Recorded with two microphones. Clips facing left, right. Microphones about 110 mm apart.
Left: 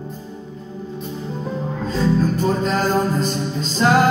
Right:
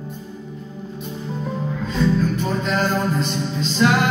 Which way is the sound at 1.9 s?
40° left (ahead or behind).